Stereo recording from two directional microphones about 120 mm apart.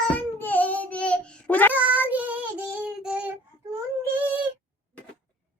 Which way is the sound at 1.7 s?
15° right (ahead or behind).